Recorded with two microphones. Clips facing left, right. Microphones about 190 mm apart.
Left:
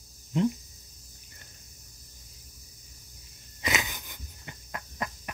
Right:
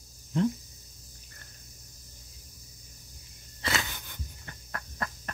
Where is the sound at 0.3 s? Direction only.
15° left (ahead or behind).